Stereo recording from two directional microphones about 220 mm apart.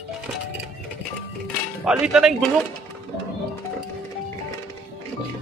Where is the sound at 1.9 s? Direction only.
5° right (ahead or behind).